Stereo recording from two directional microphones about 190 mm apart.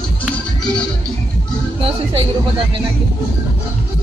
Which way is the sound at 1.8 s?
30° right (ahead or behind).